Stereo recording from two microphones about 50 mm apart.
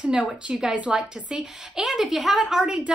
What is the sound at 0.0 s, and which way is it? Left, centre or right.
A woman's voice, right.